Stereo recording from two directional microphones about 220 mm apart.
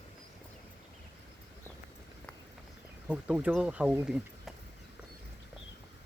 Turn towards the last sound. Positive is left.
turn(degrees=-5)  # may be behind; listen again after turning